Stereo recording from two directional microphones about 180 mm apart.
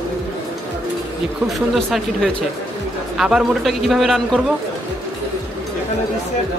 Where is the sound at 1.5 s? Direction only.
Centre (ahead or behind).